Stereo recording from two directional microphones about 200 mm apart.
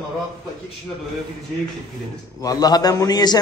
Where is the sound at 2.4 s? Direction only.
20° left (ahead or behind).